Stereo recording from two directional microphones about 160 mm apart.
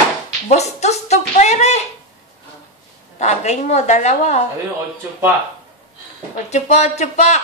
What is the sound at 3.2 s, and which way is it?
A woman's voice, 45° left (ahead or behind).